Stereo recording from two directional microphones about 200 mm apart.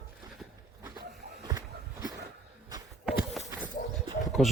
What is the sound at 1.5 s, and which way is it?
Walk, 20° right (ahead or behind).